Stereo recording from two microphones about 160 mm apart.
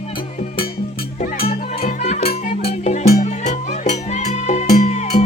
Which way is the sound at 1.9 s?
45° left (ahead or behind).